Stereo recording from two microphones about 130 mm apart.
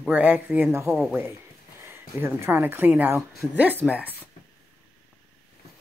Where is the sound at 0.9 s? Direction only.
5° right (ahead or behind).